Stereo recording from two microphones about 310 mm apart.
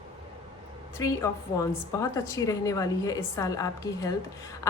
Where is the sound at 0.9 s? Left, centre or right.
Centre.